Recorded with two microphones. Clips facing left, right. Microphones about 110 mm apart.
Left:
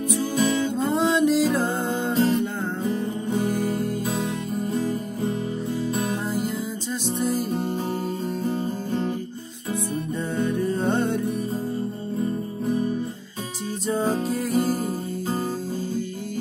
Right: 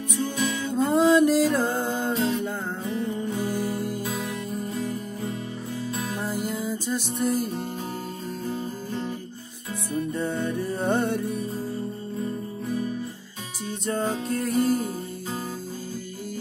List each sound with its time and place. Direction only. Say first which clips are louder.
0.1 s music: left 4 dB; 30° left (ahead or behind)
0.7 s music: right 7 dB; centre (ahead or behind)
6.2 s music: left 2 dB; centre (ahead or behind)
10.1 s music: left 2 dB; centre (ahead or behind)
13.8 s music: left 3 dB; 5° left (ahead or behind)